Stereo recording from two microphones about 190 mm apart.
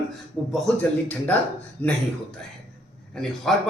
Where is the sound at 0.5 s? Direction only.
5° left (ahead or behind).